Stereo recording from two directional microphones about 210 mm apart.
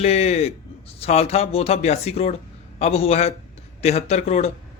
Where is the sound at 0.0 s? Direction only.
30° left (ahead or behind).